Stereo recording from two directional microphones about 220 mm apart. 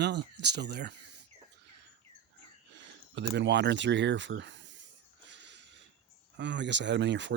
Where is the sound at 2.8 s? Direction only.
55° right (ahead or behind).